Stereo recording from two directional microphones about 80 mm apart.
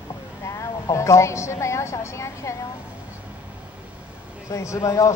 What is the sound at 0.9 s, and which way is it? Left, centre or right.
A man's voice, left.